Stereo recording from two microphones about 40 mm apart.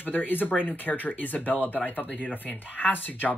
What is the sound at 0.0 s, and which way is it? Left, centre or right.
Speech, left.